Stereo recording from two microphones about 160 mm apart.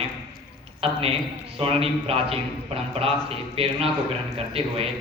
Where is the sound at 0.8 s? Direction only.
35° right (ahead or behind).